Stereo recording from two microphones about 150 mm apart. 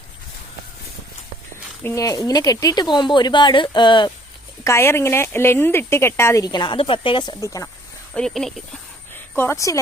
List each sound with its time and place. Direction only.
1.8 s speech: 20° left (ahead or behind)
4.6 s speech: 20° left (ahead or behind)
7.4 s speech: 20° left (ahead or behind)
8.1 s speech: 5° left (ahead or behind)
9.3 s speech: 15° left (ahead or behind)